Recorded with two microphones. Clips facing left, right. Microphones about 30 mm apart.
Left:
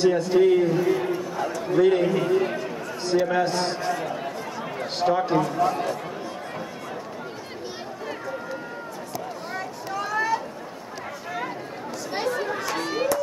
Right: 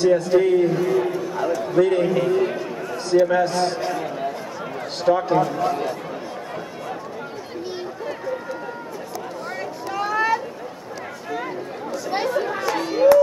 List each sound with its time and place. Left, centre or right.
0.1 s a man's voice: centre
10.0 s a sound: right
11.3 s chatter: centre